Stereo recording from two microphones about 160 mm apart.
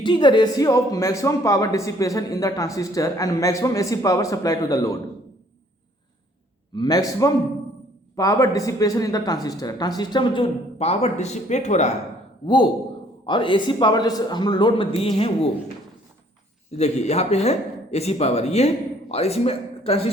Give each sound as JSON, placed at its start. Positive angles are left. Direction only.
{"t": 0.0, "sound": "speech", "side_deg": 30}
{"t": 6.7, "sound": "speech", "side_deg": 25}
{"t": 13.2, "sound": "speech", "side_deg": 30}
{"t": 16.7, "sound": "speech", "side_deg": 45}